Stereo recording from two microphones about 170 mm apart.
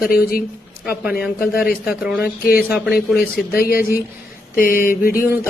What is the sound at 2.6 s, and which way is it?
Speech, 5° right (ahead or behind).